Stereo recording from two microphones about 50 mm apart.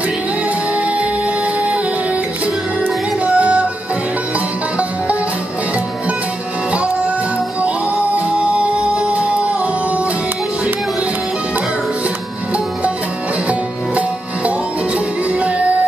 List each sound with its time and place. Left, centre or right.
0.7 s music: right
3.3 s music: right
6.7 s music: right
8.4 s music: right
13.5 s music: right